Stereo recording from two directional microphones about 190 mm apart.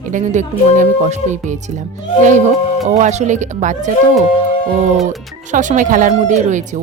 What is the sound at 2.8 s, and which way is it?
A woman's voice, 35° right (ahead or behind).